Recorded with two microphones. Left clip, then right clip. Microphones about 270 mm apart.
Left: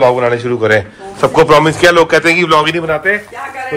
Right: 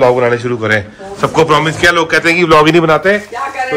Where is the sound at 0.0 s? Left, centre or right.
Centre.